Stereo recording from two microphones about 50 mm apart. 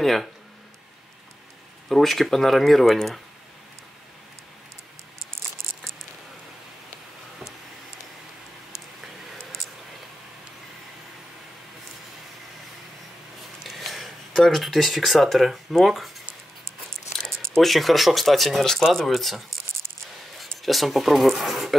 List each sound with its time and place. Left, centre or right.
0.0 s speech: centre
1.9 s speech: centre
13.7 s speech: centre
17.6 s speech: centre
20.6 s speech: centre